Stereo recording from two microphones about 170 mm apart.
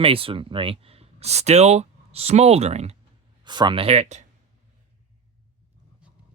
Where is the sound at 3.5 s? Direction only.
25° right (ahead or behind).